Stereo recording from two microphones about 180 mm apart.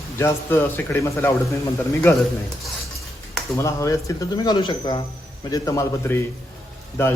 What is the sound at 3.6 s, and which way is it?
Speech, 15° left (ahead or behind).